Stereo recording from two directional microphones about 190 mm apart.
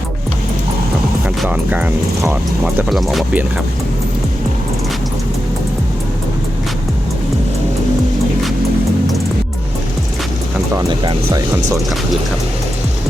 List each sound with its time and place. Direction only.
1.4 s speech: 10° right (ahead or behind)
2.9 s speech: centre (ahead or behind)
10.8 s speech: 20° right (ahead or behind)